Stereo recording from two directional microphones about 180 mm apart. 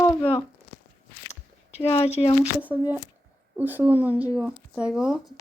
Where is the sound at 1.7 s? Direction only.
35° left (ahead or behind).